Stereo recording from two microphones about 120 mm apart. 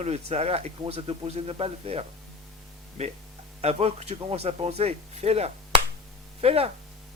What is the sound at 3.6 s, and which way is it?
Speech, 60° right (ahead or behind).